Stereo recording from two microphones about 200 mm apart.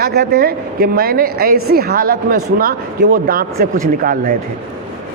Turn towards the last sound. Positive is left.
turn(degrees=-45)  # may be behind; listen again after turning